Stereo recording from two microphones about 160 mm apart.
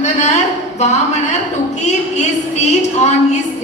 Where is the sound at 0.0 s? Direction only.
45° left (ahead or behind).